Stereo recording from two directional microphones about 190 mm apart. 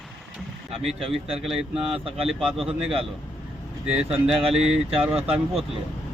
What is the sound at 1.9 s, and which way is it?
Speech, 30° right (ahead or behind).